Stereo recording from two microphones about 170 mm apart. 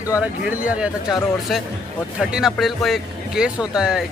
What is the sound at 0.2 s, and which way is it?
Speech, 10° right (ahead or behind).